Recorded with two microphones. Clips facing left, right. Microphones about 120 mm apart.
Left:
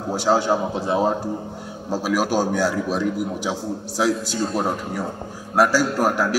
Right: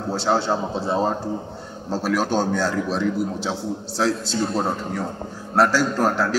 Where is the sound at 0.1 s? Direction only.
15° left (ahead or behind).